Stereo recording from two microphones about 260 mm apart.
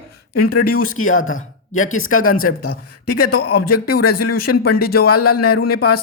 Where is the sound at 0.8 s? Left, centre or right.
Left.